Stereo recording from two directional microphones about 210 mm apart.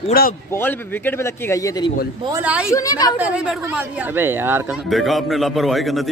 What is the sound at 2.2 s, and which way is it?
Speech, 10° right (ahead or behind).